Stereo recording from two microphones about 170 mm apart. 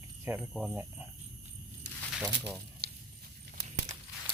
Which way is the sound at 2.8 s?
70° right (ahead or behind).